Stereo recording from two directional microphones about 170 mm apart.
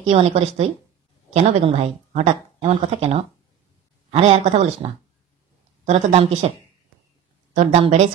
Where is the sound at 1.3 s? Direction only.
35° right (ahead or behind).